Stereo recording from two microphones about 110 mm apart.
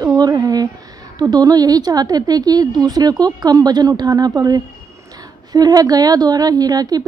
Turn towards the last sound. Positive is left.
turn(degrees=-35)  # may be behind; listen again after turning